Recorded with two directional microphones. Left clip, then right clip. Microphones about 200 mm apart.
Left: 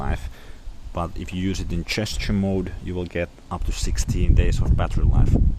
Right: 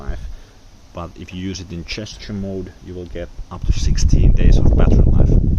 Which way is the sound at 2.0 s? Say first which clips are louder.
Left 3 dB; 40° left (ahead or behind).